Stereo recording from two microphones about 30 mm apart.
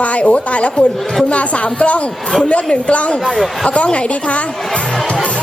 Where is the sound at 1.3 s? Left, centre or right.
Left.